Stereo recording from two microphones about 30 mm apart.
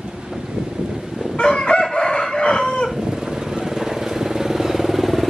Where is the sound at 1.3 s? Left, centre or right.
Left.